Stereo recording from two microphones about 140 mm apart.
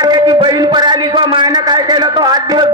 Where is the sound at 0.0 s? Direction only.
30° right (ahead or behind).